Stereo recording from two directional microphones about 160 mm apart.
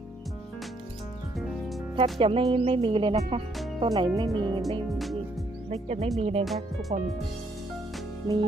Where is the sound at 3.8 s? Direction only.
25° right (ahead or behind).